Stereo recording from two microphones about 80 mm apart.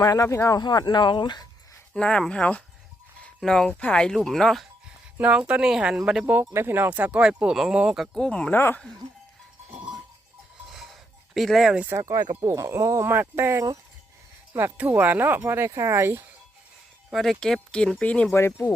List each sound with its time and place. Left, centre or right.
0.0 s speech: left
0.6 s speech: left
1.9 s speech: centre
3.7 s speech: centre
5.1 s speech: centre
6.5 s speech: right; by 8.2 s centre
8.2 s speech: centre
8.5 s speech: left
10.7 s a sound: centre
11.3 s speech: centre
11.9 s speech: right
17.1 s speech: centre
17.4 s speech: centre
18.3 s speech: left